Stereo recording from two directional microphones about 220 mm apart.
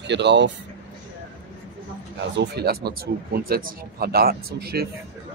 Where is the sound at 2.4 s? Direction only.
45° right (ahead or behind).